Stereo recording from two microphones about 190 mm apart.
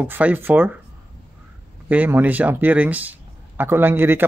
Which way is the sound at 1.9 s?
10° right (ahead or behind).